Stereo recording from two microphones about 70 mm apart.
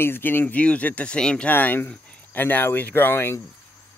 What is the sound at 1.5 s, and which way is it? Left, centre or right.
Speech, left.